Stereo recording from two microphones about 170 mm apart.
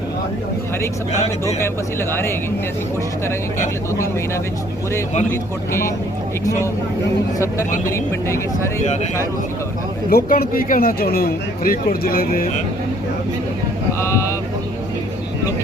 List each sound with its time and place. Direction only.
1.5 s speech: 15° left (ahead or behind)
5.3 s speech: 15° left (ahead or behind)
7.9 s speech: 15° left (ahead or behind)
10.1 s speech: 60° left (ahead or behind)
14.0 s vehicle: 15° left (ahead or behind)